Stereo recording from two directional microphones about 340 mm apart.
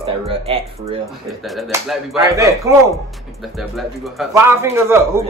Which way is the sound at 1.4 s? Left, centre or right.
Centre.